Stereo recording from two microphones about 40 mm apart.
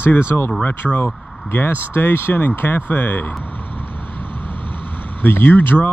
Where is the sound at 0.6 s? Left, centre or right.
Left.